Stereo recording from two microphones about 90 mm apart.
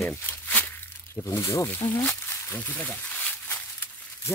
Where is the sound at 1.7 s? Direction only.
20° left (ahead or behind).